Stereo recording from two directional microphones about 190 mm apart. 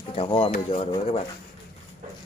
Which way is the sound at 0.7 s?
30° left (ahead or behind).